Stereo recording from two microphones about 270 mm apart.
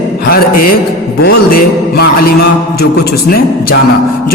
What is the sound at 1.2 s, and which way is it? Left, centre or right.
Music, left.